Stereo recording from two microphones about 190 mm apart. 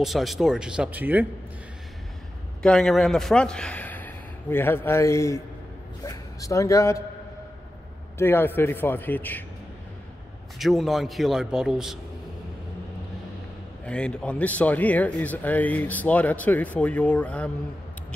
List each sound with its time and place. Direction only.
0.0 s a man's voice: centre (ahead or behind)
2.6 s speech: 5° left (ahead or behind)
8.2 s speech: 10° left (ahead or behind)
10.6 s a man's voice: centre (ahead or behind)
13.8 s speech: 5° left (ahead or behind)